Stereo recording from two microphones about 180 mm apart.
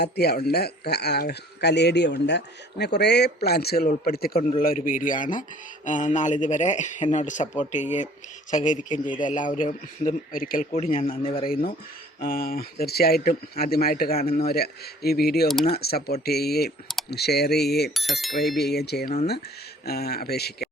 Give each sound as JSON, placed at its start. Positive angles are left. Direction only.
{"t": 0.0, "sound": "speech", "side_deg": 65}
{"t": 10.7, "sound": "a man's voice", "side_deg": 35}
{"t": 10.9, "sound": "speech", "side_deg": 50}
{"t": 11.2, "sound": "a man's voice", "side_deg": 30}
{"t": 12.2, "sound": "speech", "side_deg": 55}
{"t": 17.9, "sound": "speech", "side_deg": 0}
{"t": 18.7, "sound": "speech", "side_deg": 65}